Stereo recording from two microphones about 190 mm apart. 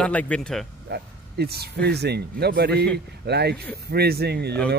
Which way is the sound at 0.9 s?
55° right (ahead or behind).